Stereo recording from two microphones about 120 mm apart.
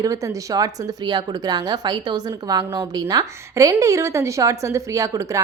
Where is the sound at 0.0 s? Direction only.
30° right (ahead or behind).